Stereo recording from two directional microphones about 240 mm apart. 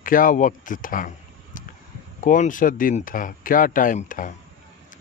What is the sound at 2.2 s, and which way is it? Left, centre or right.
Speech, left.